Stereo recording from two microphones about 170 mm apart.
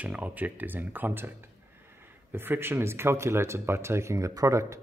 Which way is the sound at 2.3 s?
15° right (ahead or behind).